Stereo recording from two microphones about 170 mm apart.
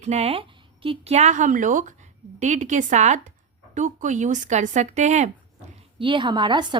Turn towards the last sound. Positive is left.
turn(degrees=-25)  # may be behind; listen again after turning